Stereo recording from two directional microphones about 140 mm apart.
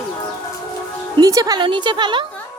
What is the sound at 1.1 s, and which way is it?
A woman's voice, 25° right (ahead or behind).